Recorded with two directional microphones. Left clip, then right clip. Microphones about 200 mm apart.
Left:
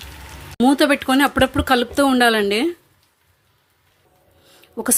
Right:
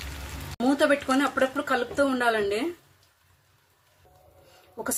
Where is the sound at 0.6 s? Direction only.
50° left (ahead or behind).